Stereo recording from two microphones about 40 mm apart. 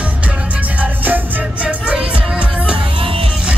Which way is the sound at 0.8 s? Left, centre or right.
Right.